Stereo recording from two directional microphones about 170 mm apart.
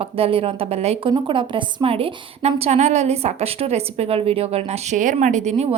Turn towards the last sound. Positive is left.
turn(degrees=-40)  # may be behind; listen again after turning